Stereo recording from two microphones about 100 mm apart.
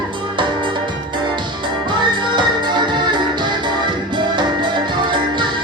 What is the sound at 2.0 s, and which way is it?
Music, 50° right (ahead or behind).